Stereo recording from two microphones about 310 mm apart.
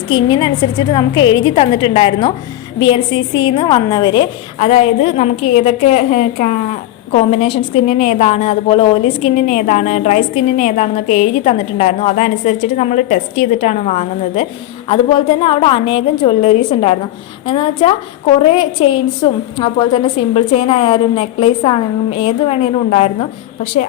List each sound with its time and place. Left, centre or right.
0.1 s a woman's voice: centre